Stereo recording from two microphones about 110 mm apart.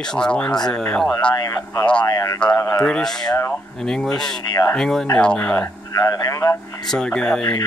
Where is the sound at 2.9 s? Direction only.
5° left (ahead or behind).